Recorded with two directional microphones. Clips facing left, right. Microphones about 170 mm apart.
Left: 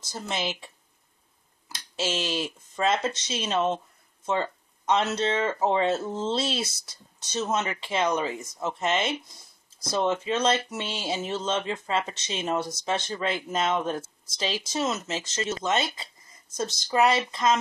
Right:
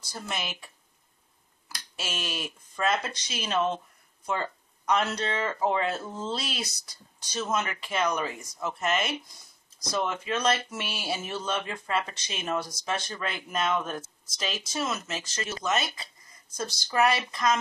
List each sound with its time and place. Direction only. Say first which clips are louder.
0.1 s speech: left 4 dB; 25° left (ahead or behind)
1.7 s speech: left 8 dB; 25° left (ahead or behind)